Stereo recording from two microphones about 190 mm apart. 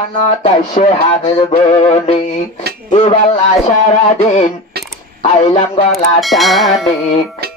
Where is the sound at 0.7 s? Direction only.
35° left (ahead or behind).